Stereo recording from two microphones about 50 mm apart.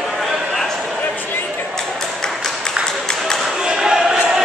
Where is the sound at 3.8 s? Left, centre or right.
Centre.